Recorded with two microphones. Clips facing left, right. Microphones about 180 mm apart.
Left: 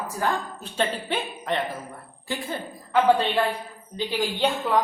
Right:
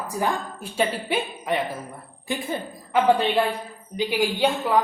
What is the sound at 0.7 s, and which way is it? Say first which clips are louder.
A woman's voice: right 2 dB; 10° right (ahead or behind).